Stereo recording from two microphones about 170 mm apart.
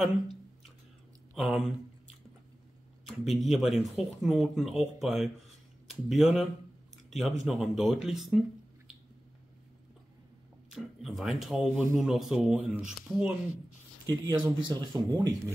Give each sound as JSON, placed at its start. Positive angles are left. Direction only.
{"t": 1.3, "sound": "a sound", "side_deg": 0}
{"t": 3.1, "sound": "speech", "side_deg": 0}
{"t": 10.7, "sound": "speech", "side_deg": 0}
{"t": 14.0, "sound": "speech", "side_deg": -25}